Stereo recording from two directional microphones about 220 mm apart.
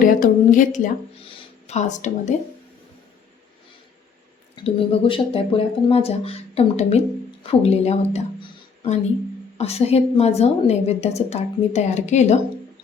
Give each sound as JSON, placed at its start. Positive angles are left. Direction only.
{"t": 0.0, "sound": "speech", "side_deg": 40}
{"t": 1.3, "sound": "a sound", "side_deg": 30}
{"t": 4.5, "sound": "a woman's voice", "side_deg": 25}